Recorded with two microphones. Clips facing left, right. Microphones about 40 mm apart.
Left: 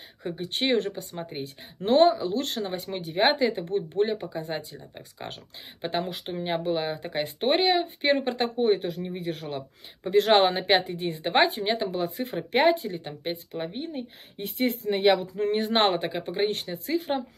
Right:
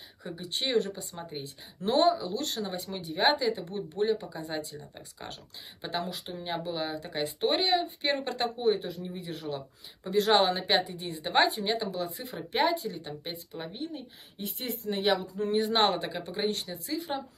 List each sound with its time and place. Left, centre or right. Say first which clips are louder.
0.2 s speech: left 6 dB; left
5.2 s a woman's voice: left 4 dB; left
6.0 s speech: left 5 dB; left
8.0 s a woman's voice: left 5 dB; left
8.7 s a woman's voice: left 5 dB; left
14.4 s speech: left 8 dB; left